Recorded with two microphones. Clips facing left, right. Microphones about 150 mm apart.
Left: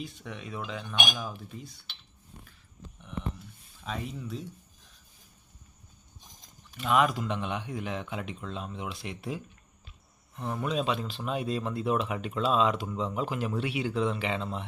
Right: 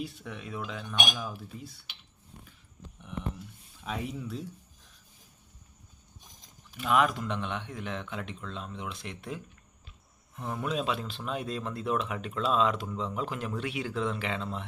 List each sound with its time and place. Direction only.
0.0 s speech: 5° right (ahead or behind)
3.8 s speech: 5° right (ahead or behind)
6.7 s speech: centre (ahead or behind)